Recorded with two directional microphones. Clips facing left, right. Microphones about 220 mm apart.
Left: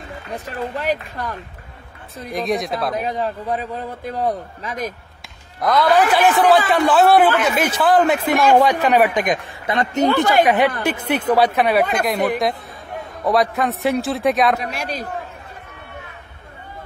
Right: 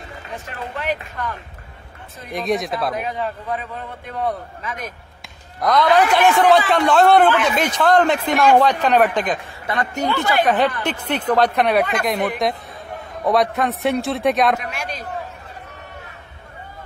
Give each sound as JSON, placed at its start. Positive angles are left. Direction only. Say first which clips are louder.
{"t": 0.5, "sound": "a man's voice", "louder": "left 3 dB", "side_deg": 35}
{"t": 2.3, "sound": "speech", "louder": "even", "side_deg": 0}
{"t": 3.0, "sound": "a man's voice", "louder": "left 2 dB", "side_deg": 35}
{"t": 5.6, "sound": "speech", "louder": "even", "side_deg": 0}
{"t": 14.6, "sound": "a man's voice", "louder": "left 3 dB", "side_deg": 35}